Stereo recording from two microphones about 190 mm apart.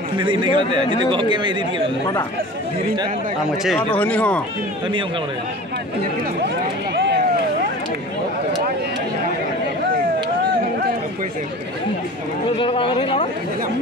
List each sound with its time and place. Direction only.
0.2 s speech: 25° right (ahead or behind)
3.6 s speech: 5° left (ahead or behind)
12.4 s speech: 25° left (ahead or behind)